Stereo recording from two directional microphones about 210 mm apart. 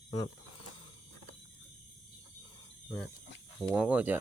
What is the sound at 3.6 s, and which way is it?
Speech, 5° right (ahead or behind).